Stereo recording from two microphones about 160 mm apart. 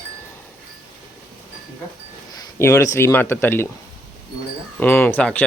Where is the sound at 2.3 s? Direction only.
20° left (ahead or behind).